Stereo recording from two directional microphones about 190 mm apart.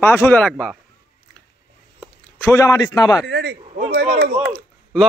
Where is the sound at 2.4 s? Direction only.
15° left (ahead or behind).